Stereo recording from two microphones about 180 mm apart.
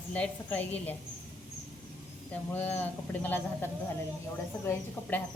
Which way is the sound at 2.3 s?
10° left (ahead or behind).